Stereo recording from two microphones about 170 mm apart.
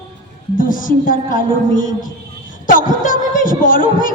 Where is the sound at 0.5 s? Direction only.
55° left (ahead or behind).